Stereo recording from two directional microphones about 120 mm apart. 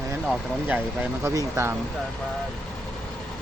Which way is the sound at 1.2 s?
25° right (ahead or behind).